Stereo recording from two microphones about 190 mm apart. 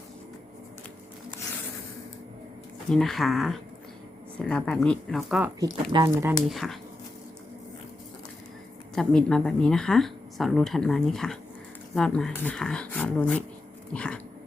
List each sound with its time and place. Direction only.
2.9 s speech: centre (ahead or behind)
5.9 s speech: 20° right (ahead or behind)
6.5 s speech: centre (ahead or behind)
9.0 s speech: centre (ahead or behind)